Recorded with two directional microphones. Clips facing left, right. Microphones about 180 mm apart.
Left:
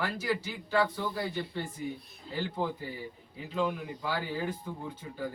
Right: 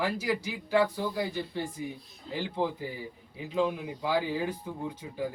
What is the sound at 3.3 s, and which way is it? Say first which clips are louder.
Speech: right 3 dB; 15° right (ahead or behind).